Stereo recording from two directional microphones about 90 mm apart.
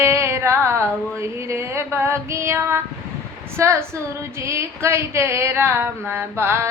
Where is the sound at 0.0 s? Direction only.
30° right (ahead or behind).